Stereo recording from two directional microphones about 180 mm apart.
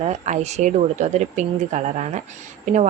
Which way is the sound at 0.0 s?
40° right (ahead or behind).